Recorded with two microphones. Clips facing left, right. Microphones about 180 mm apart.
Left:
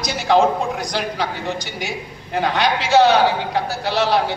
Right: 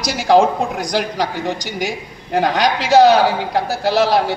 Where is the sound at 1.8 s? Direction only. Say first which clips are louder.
Right 4 dB; 40° right (ahead or behind).